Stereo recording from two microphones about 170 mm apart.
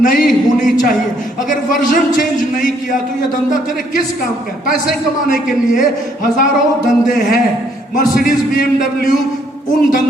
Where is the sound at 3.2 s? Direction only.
50° left (ahead or behind).